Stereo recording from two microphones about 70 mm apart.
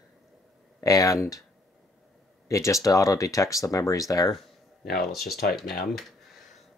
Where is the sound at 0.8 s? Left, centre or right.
Left.